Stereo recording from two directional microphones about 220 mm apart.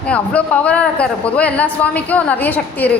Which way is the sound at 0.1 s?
5° left (ahead or behind).